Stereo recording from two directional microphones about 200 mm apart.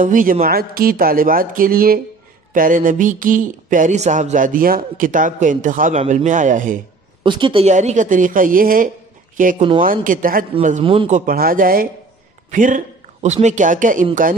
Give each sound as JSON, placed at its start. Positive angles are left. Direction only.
{"t": 0.0, "sound": "speech", "side_deg": -40}
{"t": 7.2, "sound": "speech", "side_deg": -25}
{"t": 10.8, "sound": "a man's voice", "side_deg": -25}
{"t": 11.1, "sound": "speech", "side_deg": -45}